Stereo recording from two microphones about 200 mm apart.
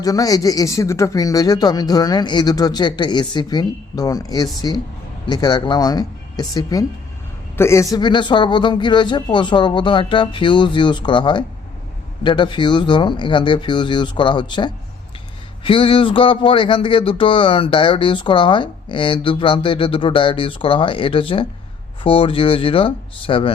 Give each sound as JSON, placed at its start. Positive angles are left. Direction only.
{"t": 0.0, "sound": "speech", "side_deg": 20}